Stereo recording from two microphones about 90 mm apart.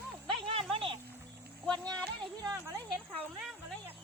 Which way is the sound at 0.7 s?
90° right.